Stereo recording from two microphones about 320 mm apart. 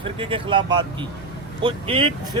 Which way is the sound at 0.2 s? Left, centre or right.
Centre.